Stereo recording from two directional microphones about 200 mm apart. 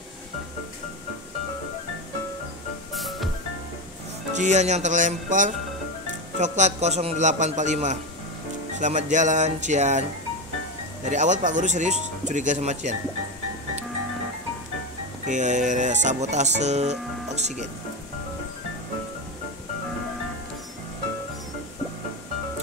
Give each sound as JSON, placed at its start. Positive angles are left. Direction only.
{"t": 2.9, "sound": "music", "side_deg": 0}
{"t": 4.3, "sound": "speech", "side_deg": -35}
{"t": 11.1, "sound": "speech", "side_deg": -40}
{"t": 15.2, "sound": "speech", "side_deg": -35}